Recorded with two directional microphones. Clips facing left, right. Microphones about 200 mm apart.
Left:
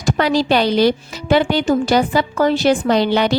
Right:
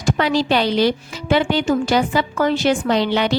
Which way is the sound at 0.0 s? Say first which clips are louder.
Left 2 dB; 40° left (ahead or behind).